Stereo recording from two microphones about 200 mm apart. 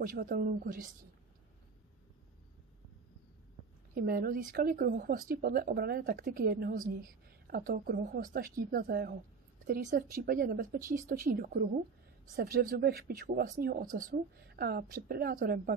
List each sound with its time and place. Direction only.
0.0 s speech: 40° right (ahead or behind)
3.9 s speech: 45° right (ahead or behind)